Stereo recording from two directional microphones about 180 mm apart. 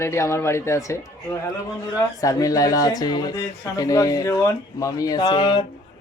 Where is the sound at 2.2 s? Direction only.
20° left (ahead or behind).